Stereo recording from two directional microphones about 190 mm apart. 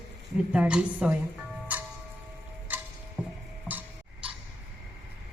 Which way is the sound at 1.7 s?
10° right (ahead or behind).